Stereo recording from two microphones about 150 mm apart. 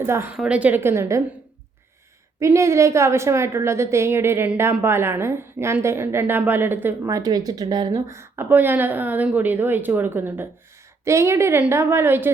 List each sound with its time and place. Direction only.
0.0 s a woman's voice: 15° right (ahead or behind)
2.4 s a woman's voice: 20° right (ahead or behind)